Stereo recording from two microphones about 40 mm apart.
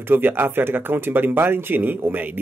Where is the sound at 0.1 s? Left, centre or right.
Right.